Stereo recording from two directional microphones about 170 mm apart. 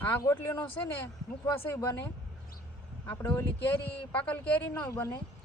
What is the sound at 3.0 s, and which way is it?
Speech, 15° left (ahead or behind).